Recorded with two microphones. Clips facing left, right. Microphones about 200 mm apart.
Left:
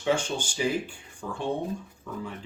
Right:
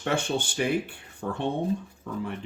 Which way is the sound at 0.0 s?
60° right (ahead or behind).